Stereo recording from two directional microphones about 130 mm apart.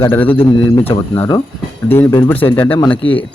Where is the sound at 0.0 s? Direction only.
15° left (ahead or behind).